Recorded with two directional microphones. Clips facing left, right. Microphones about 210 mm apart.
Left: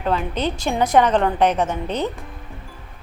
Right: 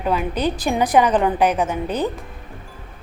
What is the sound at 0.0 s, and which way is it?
A woman's voice, 10° right (ahead or behind).